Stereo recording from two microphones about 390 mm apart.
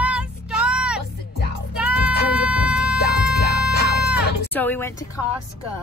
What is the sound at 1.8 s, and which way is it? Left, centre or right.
Music, centre.